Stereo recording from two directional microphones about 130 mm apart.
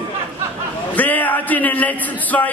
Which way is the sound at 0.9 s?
15° left (ahead or behind).